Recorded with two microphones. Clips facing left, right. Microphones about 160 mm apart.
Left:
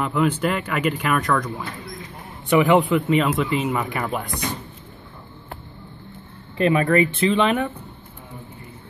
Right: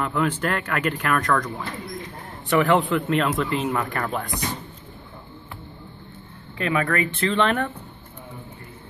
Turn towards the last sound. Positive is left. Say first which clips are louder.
# left 2 dB
turn(degrees=5)  # may be behind; listen again after turning